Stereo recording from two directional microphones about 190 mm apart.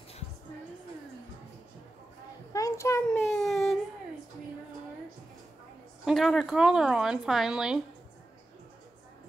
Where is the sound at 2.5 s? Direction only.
15° left (ahead or behind).